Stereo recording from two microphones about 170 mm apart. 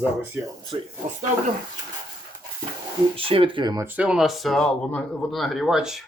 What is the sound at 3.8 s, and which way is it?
Speech, 10° right (ahead or behind).